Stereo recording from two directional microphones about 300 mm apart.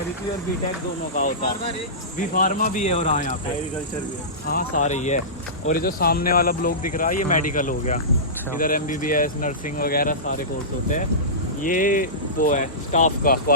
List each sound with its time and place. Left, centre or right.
1.1 s speech: left
4.4 s speech: left
11.6 s speech: left